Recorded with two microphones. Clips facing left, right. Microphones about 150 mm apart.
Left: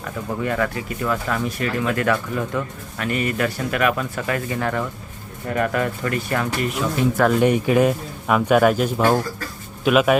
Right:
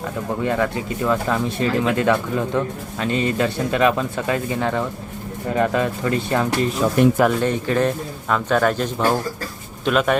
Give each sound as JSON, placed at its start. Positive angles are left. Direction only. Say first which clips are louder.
{"t": 0.4, "sound": "speech", "louder": "right 2 dB", "side_deg": -20}
{"t": 7.3, "sound": "speech", "louder": "left 3 dB", "side_deg": 10}